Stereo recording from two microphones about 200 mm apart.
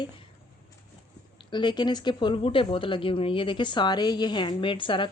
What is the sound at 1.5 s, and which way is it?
Speech, 20° left (ahead or behind).